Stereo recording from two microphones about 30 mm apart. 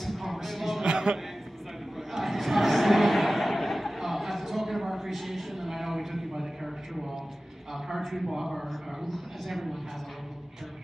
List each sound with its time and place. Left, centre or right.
0.3 s music: centre
0.8 s a sound: right
2.1 s a sound: centre
8.0 s speech: centre
8.3 s speech: centre
8.6 s a man's voice: centre